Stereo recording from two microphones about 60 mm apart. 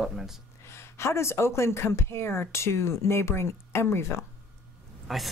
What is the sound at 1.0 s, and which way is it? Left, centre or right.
Speech, left.